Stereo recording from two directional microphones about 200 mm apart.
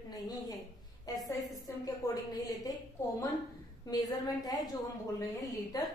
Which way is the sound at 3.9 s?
20° left (ahead or behind).